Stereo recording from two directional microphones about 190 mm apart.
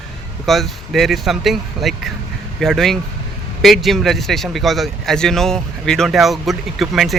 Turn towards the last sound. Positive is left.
turn(degrees=0)  # may be behind; listen again after turning